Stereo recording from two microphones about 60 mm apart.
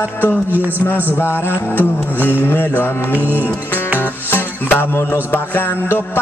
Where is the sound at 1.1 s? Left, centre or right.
Left.